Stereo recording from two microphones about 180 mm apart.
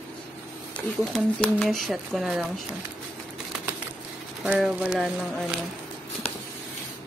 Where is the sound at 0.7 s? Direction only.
5° left (ahead or behind).